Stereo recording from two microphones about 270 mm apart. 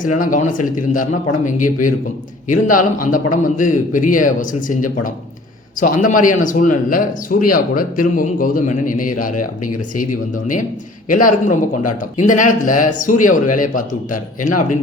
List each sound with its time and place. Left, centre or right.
0.2 s a man's voice: left